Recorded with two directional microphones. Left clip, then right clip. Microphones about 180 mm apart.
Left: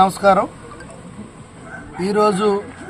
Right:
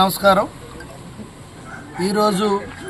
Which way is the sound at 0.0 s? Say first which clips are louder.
Left 1 dB; 10° left (ahead or behind).